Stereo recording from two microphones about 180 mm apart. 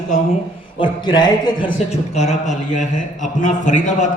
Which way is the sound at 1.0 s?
25° left (ahead or behind).